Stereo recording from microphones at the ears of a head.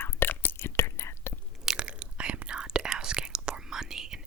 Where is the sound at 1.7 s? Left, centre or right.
Right.